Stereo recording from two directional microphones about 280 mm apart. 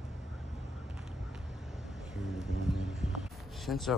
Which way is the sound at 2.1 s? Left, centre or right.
Centre.